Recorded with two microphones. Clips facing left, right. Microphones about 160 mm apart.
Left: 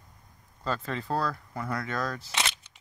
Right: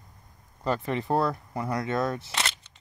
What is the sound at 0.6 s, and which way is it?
Speech, 20° right (ahead or behind).